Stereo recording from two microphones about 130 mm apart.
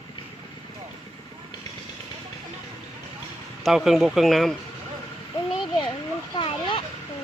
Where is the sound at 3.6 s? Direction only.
Centre (ahead or behind).